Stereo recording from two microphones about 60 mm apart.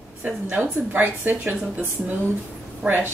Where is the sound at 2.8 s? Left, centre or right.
Centre.